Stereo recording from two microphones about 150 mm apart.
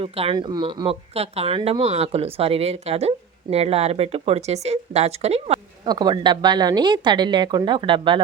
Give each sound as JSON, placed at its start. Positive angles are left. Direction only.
{"t": 0.0, "sound": "speech", "side_deg": -40}
{"t": 0.3, "sound": "speech", "side_deg": -30}
{"t": 5.8, "sound": "a woman's voice", "side_deg": -30}